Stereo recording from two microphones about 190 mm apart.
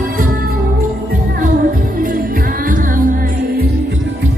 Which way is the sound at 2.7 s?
45° right (ahead or behind).